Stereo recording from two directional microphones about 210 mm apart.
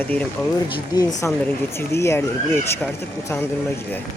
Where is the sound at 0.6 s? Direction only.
20° left (ahead or behind).